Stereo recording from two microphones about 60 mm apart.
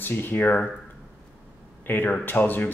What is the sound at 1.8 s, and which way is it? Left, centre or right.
Speech, left.